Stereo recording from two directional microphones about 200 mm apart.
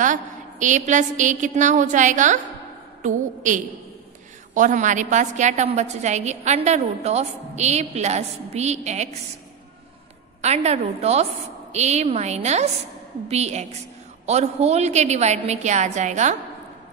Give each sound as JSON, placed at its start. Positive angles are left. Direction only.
{"t": 0.0, "sound": "a woman's voice", "side_deg": -40}
{"t": 10.4, "sound": "a woman's voice", "side_deg": -35}